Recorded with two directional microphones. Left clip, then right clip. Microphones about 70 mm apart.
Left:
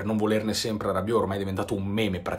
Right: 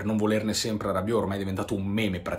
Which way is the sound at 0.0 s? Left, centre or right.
Left.